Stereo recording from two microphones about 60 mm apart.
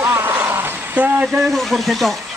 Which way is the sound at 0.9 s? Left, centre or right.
Right.